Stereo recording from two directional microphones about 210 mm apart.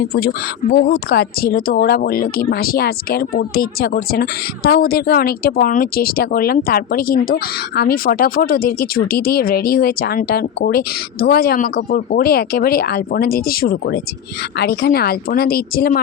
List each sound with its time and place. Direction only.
0.0 s speech: 45° left (ahead or behind)